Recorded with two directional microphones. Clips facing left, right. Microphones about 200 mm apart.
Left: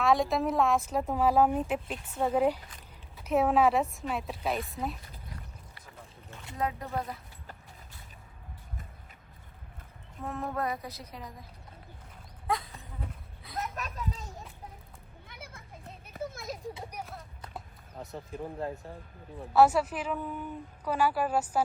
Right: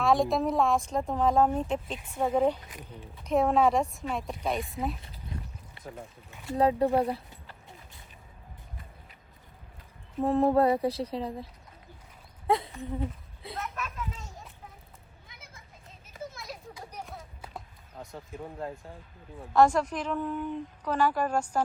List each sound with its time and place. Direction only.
0.0 s a woman's voice: centre (ahead or behind)
2.0 s speech: 10° right (ahead or behind)
2.3 s a woman's voice: 5° left (ahead or behind)
5.3 s a sound: 25° right (ahead or behind)
5.8 s boat: 25° right (ahead or behind)
6.5 s mantra: 30° right (ahead or behind)
10.2 s mantra: 30° right (ahead or behind)
12.5 s speech: 25° right (ahead or behind)
13.7 s children playing: 40° left (ahead or behind)
15.3 s children playing: 55° left (ahead or behind)
16.9 s a sound: centre (ahead or behind)
18.0 s a woman's voice: centre (ahead or behind)